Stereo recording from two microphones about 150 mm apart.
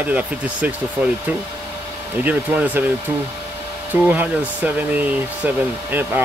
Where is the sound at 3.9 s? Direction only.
10° right (ahead or behind).